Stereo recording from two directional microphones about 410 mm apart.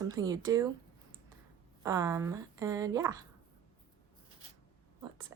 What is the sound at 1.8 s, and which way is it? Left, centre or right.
Speech, centre.